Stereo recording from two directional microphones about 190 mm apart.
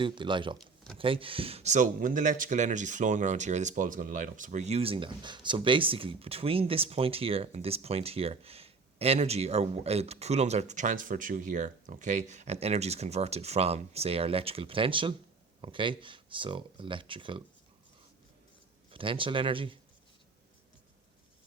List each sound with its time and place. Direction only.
0.0 s speech: 25° right (ahead or behind)
18.9 s speech: 25° right (ahead or behind)